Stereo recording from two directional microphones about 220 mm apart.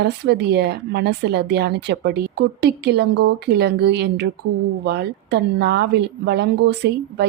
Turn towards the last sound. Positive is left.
turn(degrees=-50)  # may be behind; listen again after turning